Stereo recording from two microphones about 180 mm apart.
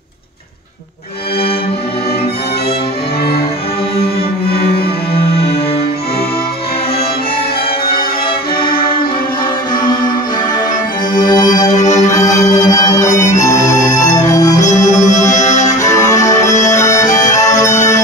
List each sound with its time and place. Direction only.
4.5 s music: 60° left (ahead or behind)
8.5 s music: 55° left (ahead or behind)
11.1 s music: 20° left (ahead or behind)
11.7 s music: 40° left (ahead or behind)
12.1 s music: 20° left (ahead or behind)
15.0 s music: 40° left (ahead or behind)
16.3 s music: 15° left (ahead or behind)
17.1 s music: 45° left (ahead or behind)
17.4 s bagpipes: 20° left (ahead or behind)
17.6 s music: 40° left (ahead or behind)